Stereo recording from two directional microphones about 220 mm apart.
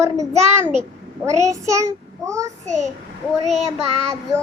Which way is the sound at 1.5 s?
15° right (ahead or behind).